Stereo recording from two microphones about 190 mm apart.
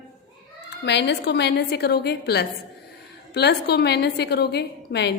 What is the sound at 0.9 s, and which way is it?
A woman's voice, 65° left (ahead or behind).